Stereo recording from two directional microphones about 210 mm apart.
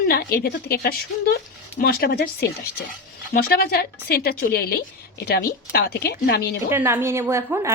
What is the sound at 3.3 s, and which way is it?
Speech, 45° left (ahead or behind).